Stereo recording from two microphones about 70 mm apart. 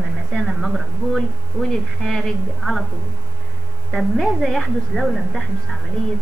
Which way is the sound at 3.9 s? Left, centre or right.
Centre.